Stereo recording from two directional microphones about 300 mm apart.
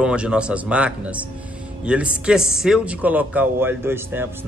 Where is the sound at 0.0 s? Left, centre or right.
Centre.